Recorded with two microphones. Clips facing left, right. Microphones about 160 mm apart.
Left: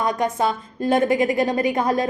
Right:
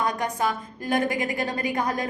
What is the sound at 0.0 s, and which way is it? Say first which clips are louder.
A woman's voice: left 4 dB; 20° left (ahead or behind).